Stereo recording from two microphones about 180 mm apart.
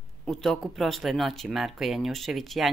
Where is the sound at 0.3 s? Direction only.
Centre (ahead or behind).